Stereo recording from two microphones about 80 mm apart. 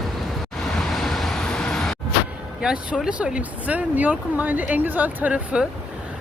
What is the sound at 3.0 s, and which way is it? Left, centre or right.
Speech, centre.